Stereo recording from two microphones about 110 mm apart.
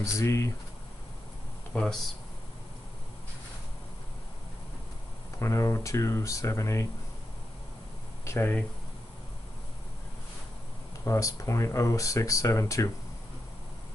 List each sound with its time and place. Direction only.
0.0 s speech: 30° left (ahead or behind)
1.7 s speech: 5° left (ahead or behind)
5.4 s speech: 30° left (ahead or behind)
8.3 s speech: 20° left (ahead or behind)
11.1 s speech: 30° left (ahead or behind)